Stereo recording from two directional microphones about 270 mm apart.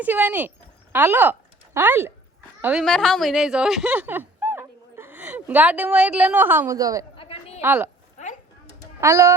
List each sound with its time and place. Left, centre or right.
0.0 s speech: centre
7.2 s a sound: left
7.6 s speech: centre
9.0 s speech: centre